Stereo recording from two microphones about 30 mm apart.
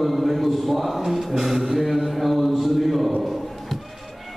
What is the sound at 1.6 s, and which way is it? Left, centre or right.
Mantra, centre.